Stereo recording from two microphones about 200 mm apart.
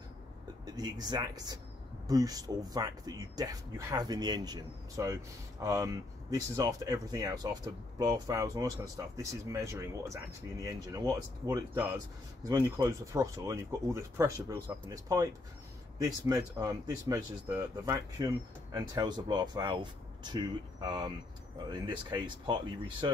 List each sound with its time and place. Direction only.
0.7 s speech: 20° right (ahead or behind)